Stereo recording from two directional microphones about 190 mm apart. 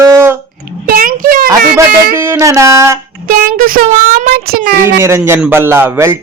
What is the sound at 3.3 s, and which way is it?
Speech, 50° right (ahead or behind).